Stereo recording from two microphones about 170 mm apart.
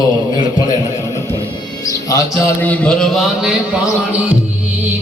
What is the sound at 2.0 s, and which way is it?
Speech, 20° left (ahead or behind).